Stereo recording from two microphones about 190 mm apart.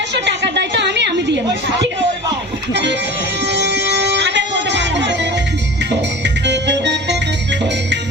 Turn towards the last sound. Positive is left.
turn(degrees=-65)  # may be behind; listen again after turning